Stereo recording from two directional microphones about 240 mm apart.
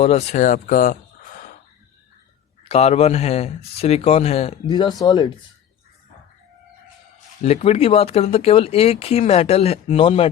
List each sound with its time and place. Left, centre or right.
0.0 s speech: left
2.6 s speech: left
7.4 s speech: left